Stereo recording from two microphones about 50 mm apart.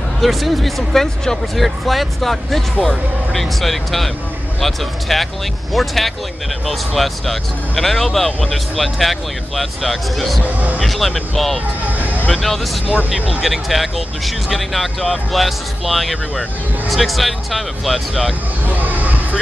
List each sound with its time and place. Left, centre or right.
0.2 s speech: centre
10.4 s speech: right
10.8 s speech: centre
12.0 s a sound: right
13.4 s speech: centre
18.7 s a sound: right